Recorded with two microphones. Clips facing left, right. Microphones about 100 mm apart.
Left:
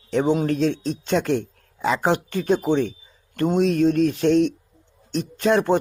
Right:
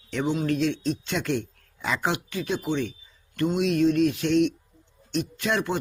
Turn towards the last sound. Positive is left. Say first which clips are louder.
# left 8 dB
turn(degrees=40)  # may be behind; listen again after turning